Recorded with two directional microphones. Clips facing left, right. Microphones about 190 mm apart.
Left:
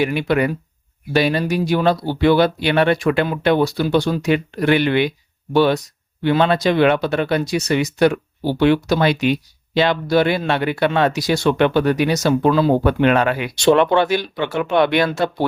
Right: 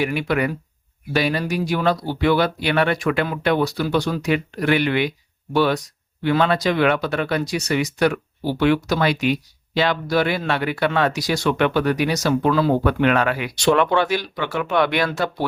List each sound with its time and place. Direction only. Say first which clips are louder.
0.0 s speech: left 3 dB; 25° left (ahead or behind)